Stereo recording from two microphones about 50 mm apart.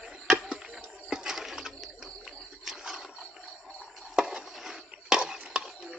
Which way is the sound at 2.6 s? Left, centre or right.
Centre.